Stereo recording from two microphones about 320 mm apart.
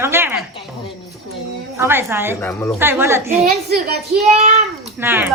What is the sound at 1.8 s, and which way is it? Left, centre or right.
Speech, centre.